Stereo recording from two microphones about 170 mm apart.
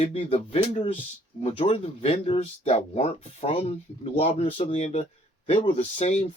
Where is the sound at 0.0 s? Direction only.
35° left (ahead or behind).